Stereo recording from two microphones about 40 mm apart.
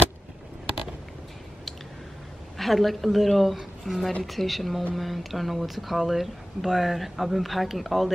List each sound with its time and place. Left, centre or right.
2.5 s speech: centre